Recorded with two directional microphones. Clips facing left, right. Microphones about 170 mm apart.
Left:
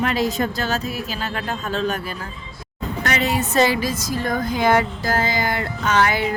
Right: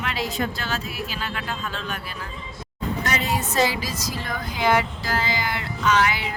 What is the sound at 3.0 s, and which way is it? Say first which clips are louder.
A woman's voice: left 6 dB; 70° left (ahead or behind).